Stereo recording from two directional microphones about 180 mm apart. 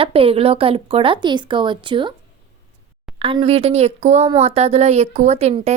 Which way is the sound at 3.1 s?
30° right (ahead or behind).